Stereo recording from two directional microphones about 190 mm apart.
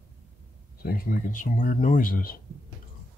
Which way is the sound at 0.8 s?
50° left (ahead or behind).